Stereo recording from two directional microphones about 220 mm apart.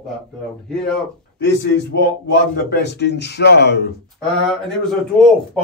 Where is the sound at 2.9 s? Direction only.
50° left (ahead or behind).